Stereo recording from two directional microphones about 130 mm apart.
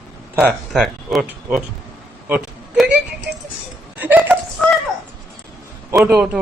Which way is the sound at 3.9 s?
15° right (ahead or behind).